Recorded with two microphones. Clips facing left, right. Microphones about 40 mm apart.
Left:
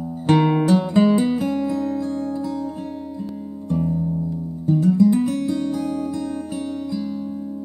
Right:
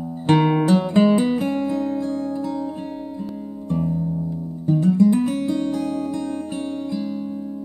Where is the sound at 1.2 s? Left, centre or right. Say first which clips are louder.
Even; right.